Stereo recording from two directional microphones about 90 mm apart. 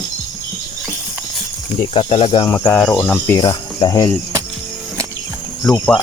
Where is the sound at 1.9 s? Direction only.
85° left.